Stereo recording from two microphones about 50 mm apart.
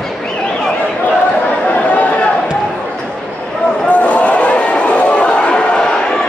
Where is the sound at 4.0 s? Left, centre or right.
Left.